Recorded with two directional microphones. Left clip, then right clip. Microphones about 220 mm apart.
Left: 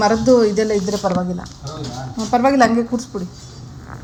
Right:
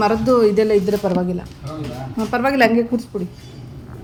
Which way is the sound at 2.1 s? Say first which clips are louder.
Left 3 dB; 25° right (ahead or behind).